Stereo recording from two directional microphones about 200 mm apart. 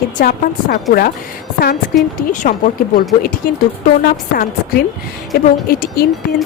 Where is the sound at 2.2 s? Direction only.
40° left (ahead or behind).